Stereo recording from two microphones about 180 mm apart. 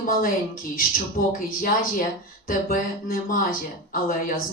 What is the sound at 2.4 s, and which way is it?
Speech, 50° left (ahead or behind).